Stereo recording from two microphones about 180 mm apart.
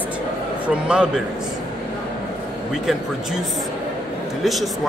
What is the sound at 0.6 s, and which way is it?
Speech, 5° right (ahead or behind).